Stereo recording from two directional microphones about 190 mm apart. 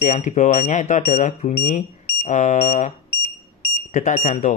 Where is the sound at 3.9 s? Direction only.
35° left (ahead or behind).